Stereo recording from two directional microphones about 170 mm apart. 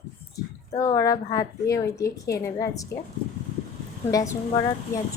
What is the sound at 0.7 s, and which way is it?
Speech, 20° left (ahead or behind).